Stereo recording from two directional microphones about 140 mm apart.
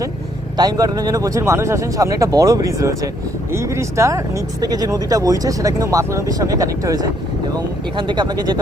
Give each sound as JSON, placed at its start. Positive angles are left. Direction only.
{"t": 0.5, "sound": "speech", "side_deg": -25}